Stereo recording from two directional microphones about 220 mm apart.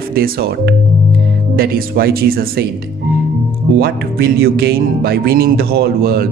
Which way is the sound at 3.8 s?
45° right (ahead or behind).